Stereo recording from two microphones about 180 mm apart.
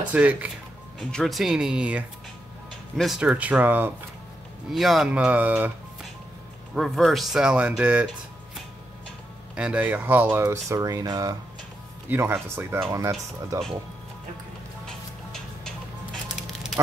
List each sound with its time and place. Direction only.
0.1 s speech: 10° right (ahead or behind)
6.7 s speech: centre (ahead or behind)
9.6 s speech: 5° right (ahead or behind)
14.9 s music: 5° left (ahead or behind)